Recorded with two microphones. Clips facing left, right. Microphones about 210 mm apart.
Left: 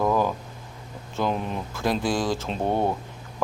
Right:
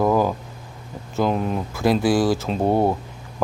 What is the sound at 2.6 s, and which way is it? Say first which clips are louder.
Speech: right 5 dB; 35° right (ahead or behind).